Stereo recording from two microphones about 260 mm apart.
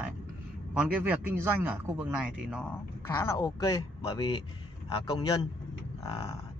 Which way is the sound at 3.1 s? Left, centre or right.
Centre.